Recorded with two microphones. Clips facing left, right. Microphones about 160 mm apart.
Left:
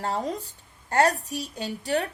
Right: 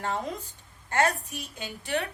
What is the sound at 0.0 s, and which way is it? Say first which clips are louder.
A woman's voice: left 3 dB; 35° left (ahead or behind).